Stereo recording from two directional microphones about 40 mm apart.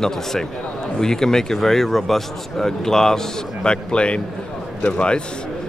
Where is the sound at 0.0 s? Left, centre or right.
Centre.